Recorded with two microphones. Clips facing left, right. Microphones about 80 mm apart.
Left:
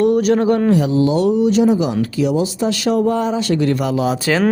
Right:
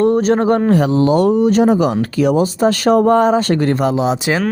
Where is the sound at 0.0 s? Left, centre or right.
Right.